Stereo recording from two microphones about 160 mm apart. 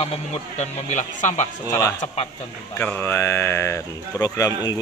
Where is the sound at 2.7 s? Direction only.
10° left (ahead or behind).